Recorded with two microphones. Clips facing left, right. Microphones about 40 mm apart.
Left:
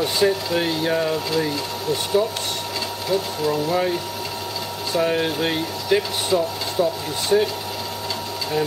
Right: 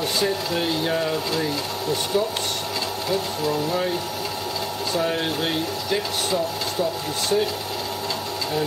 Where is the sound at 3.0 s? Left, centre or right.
Centre.